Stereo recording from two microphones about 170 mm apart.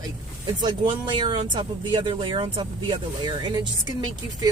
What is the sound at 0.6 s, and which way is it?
Speech, 30° right (ahead or behind).